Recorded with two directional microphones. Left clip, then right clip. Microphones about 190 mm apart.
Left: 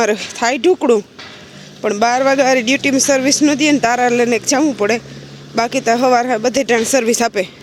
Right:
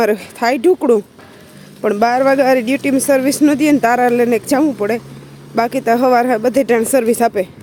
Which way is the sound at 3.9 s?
10° right (ahead or behind).